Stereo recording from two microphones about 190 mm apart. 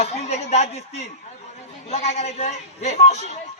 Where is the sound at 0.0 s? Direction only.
35° left (ahead or behind).